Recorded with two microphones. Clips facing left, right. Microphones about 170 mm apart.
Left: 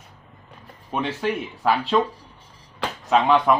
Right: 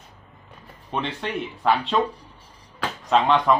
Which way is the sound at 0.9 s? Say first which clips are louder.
Left 3 dB; 5° left (ahead or behind).